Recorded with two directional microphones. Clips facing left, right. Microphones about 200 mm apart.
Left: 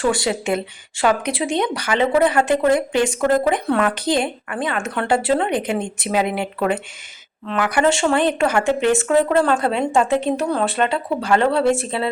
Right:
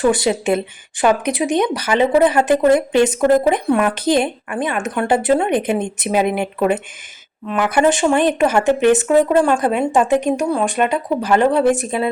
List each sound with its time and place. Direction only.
0.0 s a woman's voice: 20° right (ahead or behind)